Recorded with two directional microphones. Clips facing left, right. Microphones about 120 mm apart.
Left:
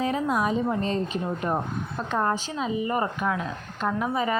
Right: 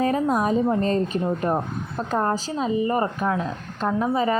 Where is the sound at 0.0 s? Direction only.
45° right (ahead or behind).